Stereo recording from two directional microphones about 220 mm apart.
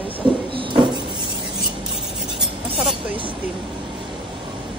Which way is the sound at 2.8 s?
Centre (ahead or behind).